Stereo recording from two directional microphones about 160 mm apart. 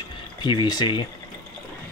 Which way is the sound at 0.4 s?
30° left (ahead or behind).